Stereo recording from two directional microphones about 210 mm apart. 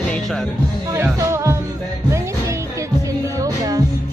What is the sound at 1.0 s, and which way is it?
Music, 15° right (ahead or behind).